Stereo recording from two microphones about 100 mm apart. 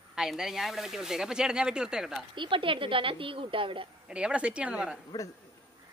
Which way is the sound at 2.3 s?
55° right (ahead or behind).